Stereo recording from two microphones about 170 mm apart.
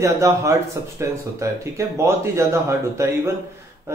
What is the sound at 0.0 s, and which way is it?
Speech, 15° right (ahead or behind).